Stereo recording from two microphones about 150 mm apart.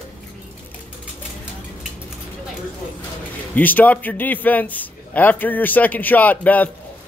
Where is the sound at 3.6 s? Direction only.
10° left (ahead or behind).